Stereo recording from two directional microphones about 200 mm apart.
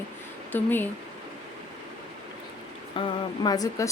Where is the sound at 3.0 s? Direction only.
25° left (ahead or behind).